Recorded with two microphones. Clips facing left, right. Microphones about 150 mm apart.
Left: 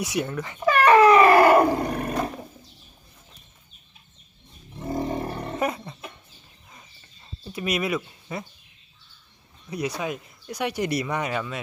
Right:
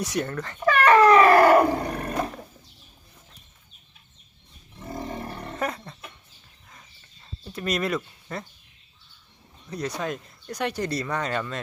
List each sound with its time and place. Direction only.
0.0 s wild animals: 10° left (ahead or behind)
4.8 s roar: 25° left (ahead or behind)
5.5 s roaring cats: 10° left (ahead or behind)
7.4 s speech: 5° left (ahead or behind)
9.6 s speech: 10° left (ahead or behind)